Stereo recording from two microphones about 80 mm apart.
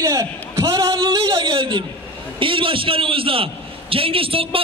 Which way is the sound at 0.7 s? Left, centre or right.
Right.